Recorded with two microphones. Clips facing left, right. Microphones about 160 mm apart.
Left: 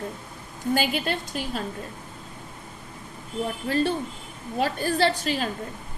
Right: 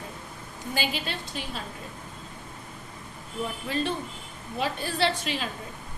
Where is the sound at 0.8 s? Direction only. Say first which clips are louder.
Left 2 dB; 50° left (ahead or behind).